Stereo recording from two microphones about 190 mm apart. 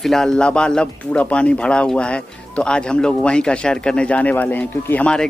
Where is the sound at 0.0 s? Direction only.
Centre (ahead or behind).